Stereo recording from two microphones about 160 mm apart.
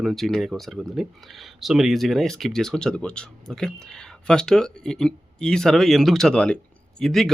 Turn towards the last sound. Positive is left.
turn(degrees=0)  # may be behind; listen again after turning